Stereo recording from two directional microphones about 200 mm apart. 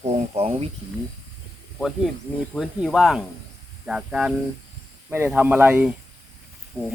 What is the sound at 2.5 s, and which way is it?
Speech, 5° right (ahead or behind).